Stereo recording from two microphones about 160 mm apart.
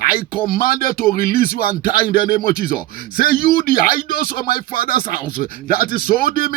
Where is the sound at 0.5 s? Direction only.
65° left (ahead or behind).